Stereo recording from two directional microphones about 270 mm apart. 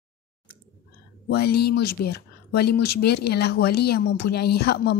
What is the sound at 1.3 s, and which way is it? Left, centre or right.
Speech, left.